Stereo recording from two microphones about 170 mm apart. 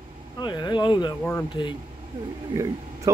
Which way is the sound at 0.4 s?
25° left (ahead or behind).